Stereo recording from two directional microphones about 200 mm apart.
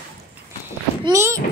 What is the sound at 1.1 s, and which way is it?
Speech, 15° right (ahead or behind).